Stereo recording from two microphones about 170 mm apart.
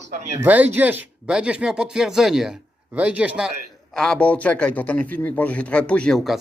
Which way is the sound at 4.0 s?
5° left (ahead or behind).